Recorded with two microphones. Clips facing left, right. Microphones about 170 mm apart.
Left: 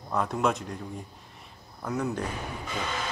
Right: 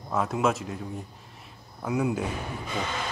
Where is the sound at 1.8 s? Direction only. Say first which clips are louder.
Right 3 dB; 10° right (ahead or behind).